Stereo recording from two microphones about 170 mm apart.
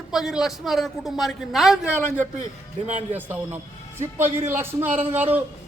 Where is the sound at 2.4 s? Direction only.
45° right (ahead or behind).